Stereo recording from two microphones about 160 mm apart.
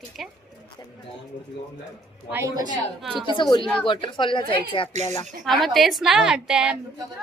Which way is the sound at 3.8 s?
30° left (ahead or behind).